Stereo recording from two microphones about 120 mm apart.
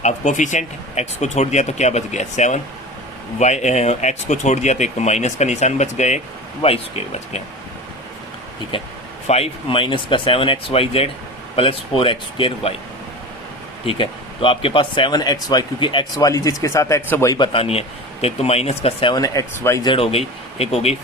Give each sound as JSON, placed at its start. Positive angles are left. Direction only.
{"t": 0.0, "sound": "speech", "side_deg": 90}
{"t": 6.6, "sound": "speech", "side_deg": 60}
{"t": 8.7, "sound": "speech", "side_deg": 45}
{"t": 9.2, "sound": "speech", "side_deg": 55}
{"t": 13.8, "sound": "speech", "side_deg": 45}
{"t": 17.3, "sound": "speech", "side_deg": 45}
{"t": 19.1, "sound": "speech", "side_deg": 30}
{"t": 19.8, "sound": "speech", "side_deg": 50}